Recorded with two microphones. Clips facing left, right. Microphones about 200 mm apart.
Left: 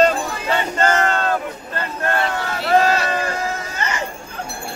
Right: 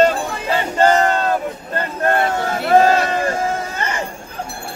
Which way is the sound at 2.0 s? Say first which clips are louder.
Right 4 dB; 50° right (ahead or behind).